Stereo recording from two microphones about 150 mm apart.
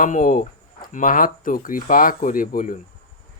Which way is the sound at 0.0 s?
60° left (ahead or behind).